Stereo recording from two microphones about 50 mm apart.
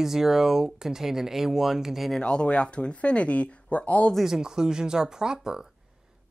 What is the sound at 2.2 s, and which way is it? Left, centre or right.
Speech, left.